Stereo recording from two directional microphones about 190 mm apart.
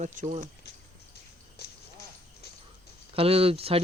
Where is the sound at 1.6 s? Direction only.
55° left (ahead or behind).